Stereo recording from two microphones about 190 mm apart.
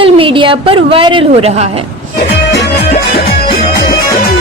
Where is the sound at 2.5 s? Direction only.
60° left (ahead or behind).